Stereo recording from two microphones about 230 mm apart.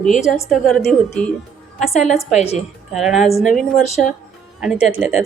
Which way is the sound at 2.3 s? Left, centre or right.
Left.